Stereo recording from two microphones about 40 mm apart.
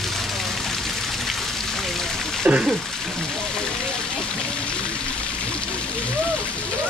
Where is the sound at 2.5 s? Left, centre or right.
Right.